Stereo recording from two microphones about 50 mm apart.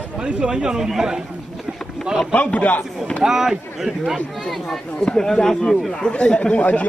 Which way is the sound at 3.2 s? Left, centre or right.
Centre.